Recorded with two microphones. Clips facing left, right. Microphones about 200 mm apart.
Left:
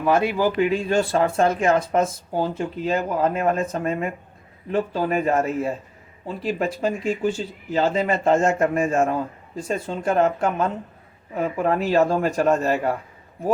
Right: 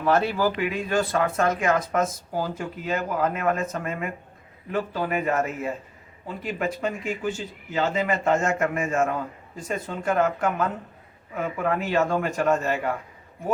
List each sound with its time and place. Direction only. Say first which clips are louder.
0.0 s speech: left 2 dB; 15° left (ahead or behind)
0.5 s speech: left 5 dB; 30° left (ahead or behind)